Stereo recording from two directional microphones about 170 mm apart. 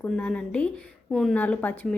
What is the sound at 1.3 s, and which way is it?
Speech, 10° left (ahead or behind).